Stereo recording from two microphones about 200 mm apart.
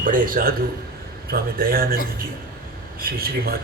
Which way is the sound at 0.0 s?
40° right (ahead or behind).